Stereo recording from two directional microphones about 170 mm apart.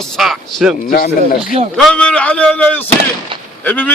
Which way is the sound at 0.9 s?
60° left (ahead or behind).